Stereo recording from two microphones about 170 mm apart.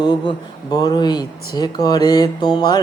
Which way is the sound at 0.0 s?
25° left (ahead or behind).